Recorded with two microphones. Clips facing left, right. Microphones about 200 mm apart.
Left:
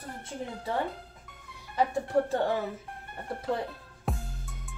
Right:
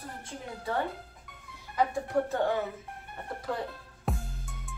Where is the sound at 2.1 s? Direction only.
30° left (ahead or behind).